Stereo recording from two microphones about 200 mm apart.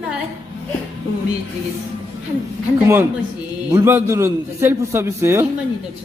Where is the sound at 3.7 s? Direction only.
10° right (ahead or behind).